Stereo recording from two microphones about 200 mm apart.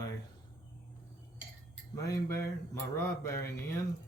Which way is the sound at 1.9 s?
15° left (ahead or behind).